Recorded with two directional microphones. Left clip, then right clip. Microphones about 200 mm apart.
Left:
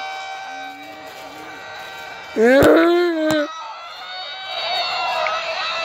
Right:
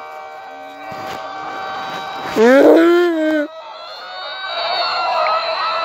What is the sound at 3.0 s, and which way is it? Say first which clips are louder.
Baby cry: right 3 dB; 15° right (ahead or behind).